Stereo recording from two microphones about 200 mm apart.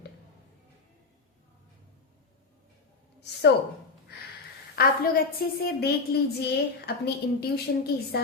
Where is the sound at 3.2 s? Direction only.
55° left (ahead or behind).